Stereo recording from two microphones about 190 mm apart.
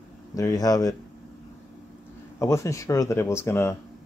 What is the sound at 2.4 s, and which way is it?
Speech, 15° left (ahead or behind).